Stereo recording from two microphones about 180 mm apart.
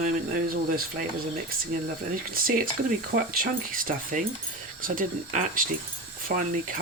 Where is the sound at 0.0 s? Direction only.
50° right (ahead or behind).